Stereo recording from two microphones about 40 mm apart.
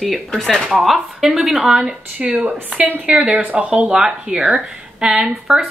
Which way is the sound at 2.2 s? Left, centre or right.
Right.